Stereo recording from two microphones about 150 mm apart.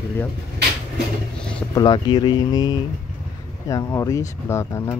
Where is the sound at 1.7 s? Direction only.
30° left (ahead or behind).